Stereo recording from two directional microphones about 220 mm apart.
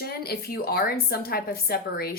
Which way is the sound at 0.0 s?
45° left (ahead or behind).